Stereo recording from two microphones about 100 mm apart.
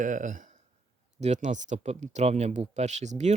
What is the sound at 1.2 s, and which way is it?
Speech, 90° right.